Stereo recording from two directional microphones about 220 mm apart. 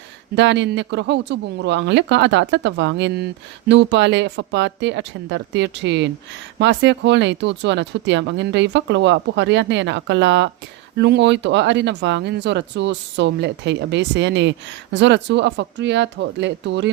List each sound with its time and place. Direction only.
0.3 s speech: 55° right (ahead or behind)